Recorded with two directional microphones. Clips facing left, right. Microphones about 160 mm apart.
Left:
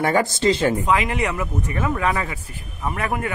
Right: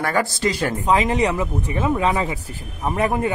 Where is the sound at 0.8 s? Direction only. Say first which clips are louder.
Right 3 dB; 25° right (ahead or behind).